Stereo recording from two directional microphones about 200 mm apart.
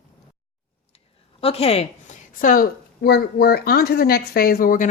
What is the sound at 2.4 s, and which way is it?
Speech, 45° left (ahead or behind).